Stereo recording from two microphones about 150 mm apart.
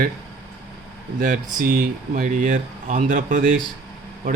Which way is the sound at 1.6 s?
70° right (ahead or behind).